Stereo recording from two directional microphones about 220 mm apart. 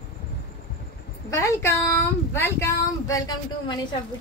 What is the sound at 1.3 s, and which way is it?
A woman's voice, 15° left (ahead or behind).